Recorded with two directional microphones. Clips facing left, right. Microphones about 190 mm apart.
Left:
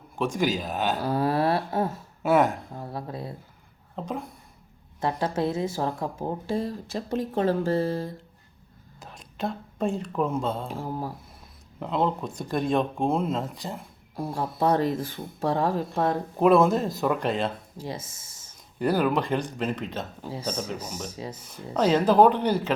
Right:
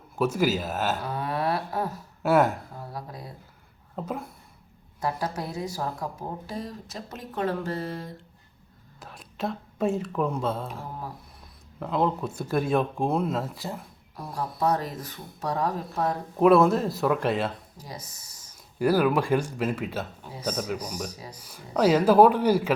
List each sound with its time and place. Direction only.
0.2 s speech: 5° right (ahead or behind)
0.9 s a sound: 30° left (ahead or behind)
2.2 s speech: 5° right (ahead or behind)
2.7 s speech: 25° left (ahead or behind)
3.9 s speech: 5° right (ahead or behind)
4.9 s speech: 25° left (ahead or behind)
9.0 s speech: centre (ahead or behind)
11.8 s speech: centre (ahead or behind)
14.2 s speech: 25° left (ahead or behind)
16.4 s speech: centre (ahead or behind)
17.7 s speech: 25° left (ahead or behind)
18.8 s speech: 5° right (ahead or behind)
20.3 s speech: 30° left (ahead or behind)
21.8 s speech: 10° right (ahead or behind)